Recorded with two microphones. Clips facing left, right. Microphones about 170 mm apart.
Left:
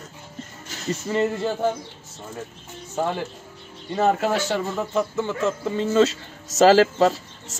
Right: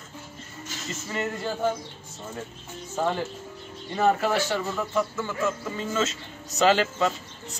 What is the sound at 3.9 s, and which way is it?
Speech, 20° left (ahead or behind).